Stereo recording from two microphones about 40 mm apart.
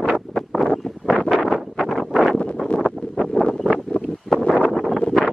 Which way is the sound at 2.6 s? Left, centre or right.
Centre.